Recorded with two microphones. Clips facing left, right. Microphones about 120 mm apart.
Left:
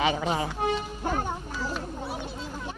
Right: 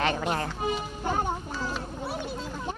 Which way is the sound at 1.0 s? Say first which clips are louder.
Right 1 dB; 15° right (ahead or behind).